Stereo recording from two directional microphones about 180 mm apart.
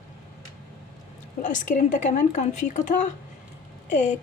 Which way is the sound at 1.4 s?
45° left (ahead or behind).